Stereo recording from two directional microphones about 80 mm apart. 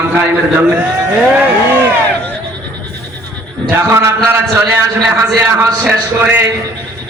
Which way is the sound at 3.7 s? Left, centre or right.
Right.